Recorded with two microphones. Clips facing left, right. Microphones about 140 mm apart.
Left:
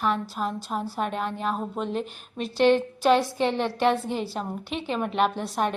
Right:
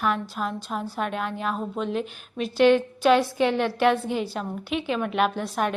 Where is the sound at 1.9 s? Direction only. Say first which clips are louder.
Right 2 dB; 35° left (ahead or behind).